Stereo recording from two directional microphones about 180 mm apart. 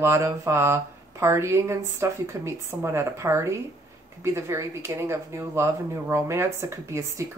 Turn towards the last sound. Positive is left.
turn(degrees=-15)  # may be behind; listen again after turning